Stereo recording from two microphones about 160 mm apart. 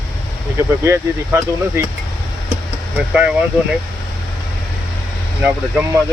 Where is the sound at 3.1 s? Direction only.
5° right (ahead or behind).